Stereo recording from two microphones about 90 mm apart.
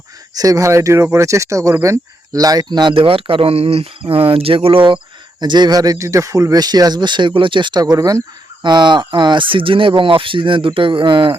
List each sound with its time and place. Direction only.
0.3 s speech: 40° right (ahead or behind)
2.9 s speech: 90° right
5.4 s speech: 55° right (ahead or behind)
8.6 s speech: 55° right (ahead or behind)